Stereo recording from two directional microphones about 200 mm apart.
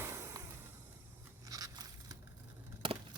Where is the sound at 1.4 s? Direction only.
15° right (ahead or behind).